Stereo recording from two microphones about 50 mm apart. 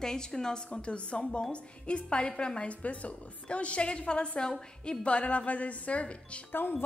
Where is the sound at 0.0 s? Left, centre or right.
Centre.